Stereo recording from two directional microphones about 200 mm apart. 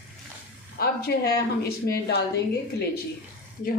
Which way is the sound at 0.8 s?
50° left (ahead or behind).